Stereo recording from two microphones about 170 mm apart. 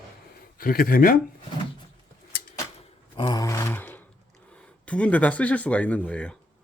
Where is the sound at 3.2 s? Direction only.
25° left (ahead or behind).